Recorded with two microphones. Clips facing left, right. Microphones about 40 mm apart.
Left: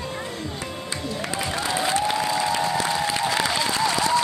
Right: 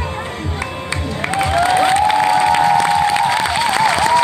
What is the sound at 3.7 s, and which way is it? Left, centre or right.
Applause, right.